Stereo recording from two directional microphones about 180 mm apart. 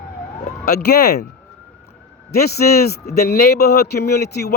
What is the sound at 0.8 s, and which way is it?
Speech, 65° left (ahead or behind).